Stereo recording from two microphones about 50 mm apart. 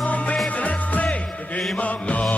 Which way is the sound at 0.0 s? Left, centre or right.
Left.